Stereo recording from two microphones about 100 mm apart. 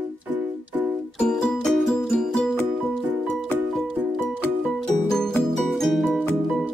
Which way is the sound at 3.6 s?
Centre (ahead or behind).